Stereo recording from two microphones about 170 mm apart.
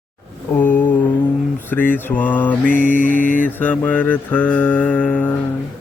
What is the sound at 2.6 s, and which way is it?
Mantra, 50° left (ahead or behind).